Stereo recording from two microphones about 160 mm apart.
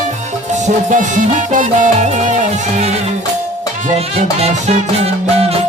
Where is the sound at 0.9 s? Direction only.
55° right (ahead or behind).